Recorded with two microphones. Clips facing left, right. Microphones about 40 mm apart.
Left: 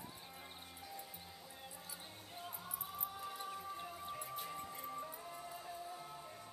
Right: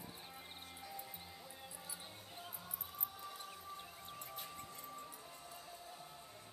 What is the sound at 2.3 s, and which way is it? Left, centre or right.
Music, centre.